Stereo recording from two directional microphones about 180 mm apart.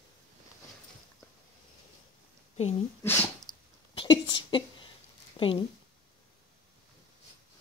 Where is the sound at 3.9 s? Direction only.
25° left (ahead or behind).